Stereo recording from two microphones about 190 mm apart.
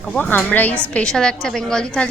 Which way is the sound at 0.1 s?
10° left (ahead or behind).